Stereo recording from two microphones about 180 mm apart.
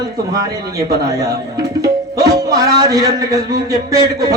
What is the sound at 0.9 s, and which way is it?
Speech, 60° right (ahead or behind).